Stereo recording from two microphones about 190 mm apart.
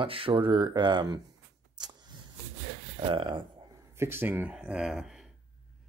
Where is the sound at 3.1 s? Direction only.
25° right (ahead or behind).